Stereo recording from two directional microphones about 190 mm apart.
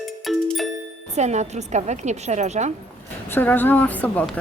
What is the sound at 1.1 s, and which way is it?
Speech, 35° right (ahead or behind).